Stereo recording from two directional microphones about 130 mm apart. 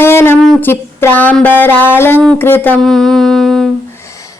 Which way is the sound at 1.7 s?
15° right (ahead or behind).